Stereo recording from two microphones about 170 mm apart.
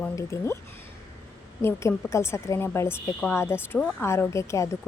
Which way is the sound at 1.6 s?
15° left (ahead or behind).